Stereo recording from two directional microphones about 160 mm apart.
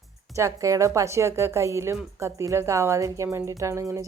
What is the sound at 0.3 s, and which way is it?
Speech, 20° right (ahead or behind).